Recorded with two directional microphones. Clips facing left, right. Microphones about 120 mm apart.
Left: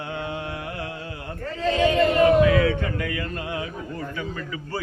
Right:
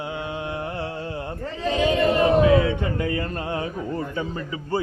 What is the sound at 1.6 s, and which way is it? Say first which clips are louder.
A man's voice: left 1 dB; 15° right (ahead or behind).